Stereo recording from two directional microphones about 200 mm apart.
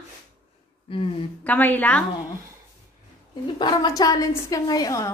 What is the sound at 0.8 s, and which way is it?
Speech, 25° left (ahead or behind).